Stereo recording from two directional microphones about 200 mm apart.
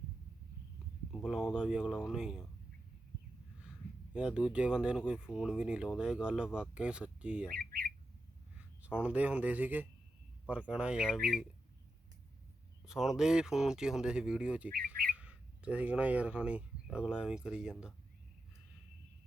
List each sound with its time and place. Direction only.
1.1 s speech: centre (ahead or behind)
4.1 s speech: 5° right (ahead or behind)
7.6 s speech: 50° right (ahead or behind)
8.5 s speech: 5° right (ahead or behind)
12.8 s speech: centre (ahead or behind)